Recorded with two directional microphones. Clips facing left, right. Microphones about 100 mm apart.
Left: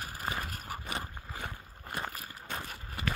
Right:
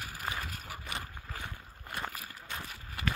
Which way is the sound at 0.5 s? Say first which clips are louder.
Left 3 dB; 40° left (ahead or behind).